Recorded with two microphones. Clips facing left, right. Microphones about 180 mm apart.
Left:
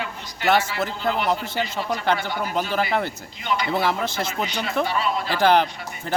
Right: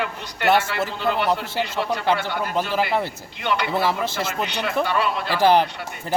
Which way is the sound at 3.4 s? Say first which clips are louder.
Right 2 dB; 65° right (ahead or behind).